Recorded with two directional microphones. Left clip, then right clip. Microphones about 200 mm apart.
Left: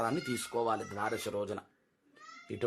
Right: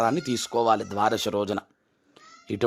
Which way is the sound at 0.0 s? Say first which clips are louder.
Right 9 dB; 40° right (ahead or behind).